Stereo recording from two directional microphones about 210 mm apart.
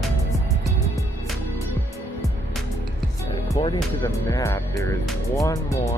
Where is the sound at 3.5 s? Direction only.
20° left (ahead or behind).